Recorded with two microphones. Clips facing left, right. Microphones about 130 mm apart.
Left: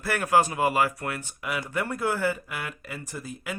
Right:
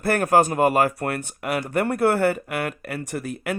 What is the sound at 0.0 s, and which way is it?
Speech, 50° right (ahead or behind).